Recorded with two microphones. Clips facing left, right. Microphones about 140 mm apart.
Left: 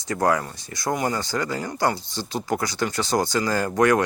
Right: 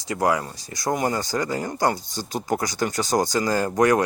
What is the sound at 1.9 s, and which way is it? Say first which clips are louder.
Speech: even; 45° right (ahead or behind).